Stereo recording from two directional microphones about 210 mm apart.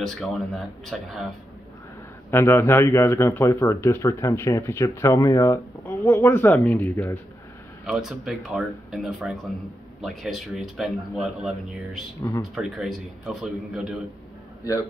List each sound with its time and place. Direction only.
0.0 s speech: centre (ahead or behind)
2.3 s speech: 10° left (ahead or behind)
12.2 s speech: 15° left (ahead or behind)
12.5 s speech: centre (ahead or behind)
14.7 s speech: 15° left (ahead or behind)